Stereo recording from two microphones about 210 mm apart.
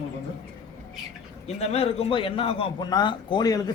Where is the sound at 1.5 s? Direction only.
30° left (ahead or behind).